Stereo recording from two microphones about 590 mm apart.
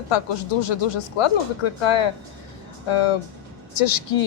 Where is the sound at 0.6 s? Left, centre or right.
Left.